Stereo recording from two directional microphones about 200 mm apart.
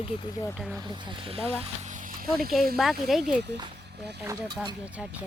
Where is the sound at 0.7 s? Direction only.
25° right (ahead or behind); by 2.3 s 40° right (ahead or behind).